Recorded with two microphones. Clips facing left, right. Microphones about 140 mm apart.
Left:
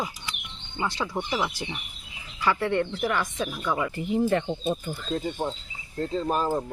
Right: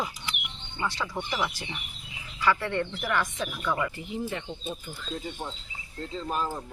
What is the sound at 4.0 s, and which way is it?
Speech, 50° left (ahead or behind).